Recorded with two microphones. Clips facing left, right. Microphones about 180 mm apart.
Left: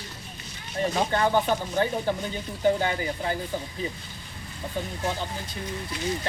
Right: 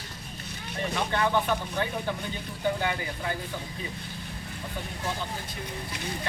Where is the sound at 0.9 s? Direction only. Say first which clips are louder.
Left 2 dB; 35° left (ahead or behind).